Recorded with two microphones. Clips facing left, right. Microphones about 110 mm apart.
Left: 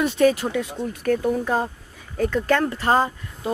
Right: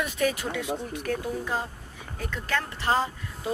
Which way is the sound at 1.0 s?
55° left (ahead or behind).